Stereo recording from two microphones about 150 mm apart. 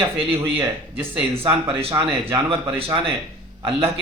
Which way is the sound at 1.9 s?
30° right (ahead or behind).